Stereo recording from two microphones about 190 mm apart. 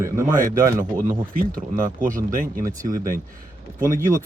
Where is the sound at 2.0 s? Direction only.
45° right (ahead or behind).